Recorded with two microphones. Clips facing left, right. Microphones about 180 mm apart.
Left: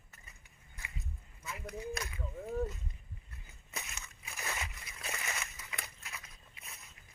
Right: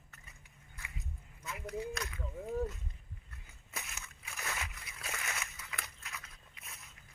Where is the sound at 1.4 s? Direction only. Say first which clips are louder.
Right 2 dB; centre (ahead or behind).